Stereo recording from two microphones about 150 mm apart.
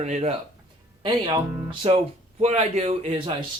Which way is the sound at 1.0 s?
30° right (ahead or behind).